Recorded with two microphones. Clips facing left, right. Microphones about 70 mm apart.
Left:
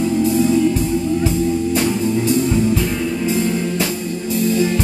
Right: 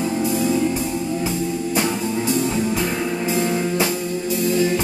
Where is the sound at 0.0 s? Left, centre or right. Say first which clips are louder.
Left 5 dB; centre.